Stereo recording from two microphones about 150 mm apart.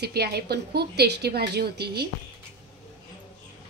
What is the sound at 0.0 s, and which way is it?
Speech, 90° right.